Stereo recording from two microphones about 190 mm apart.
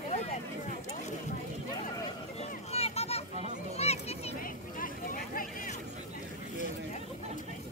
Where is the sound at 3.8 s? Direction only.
35° left (ahead or behind).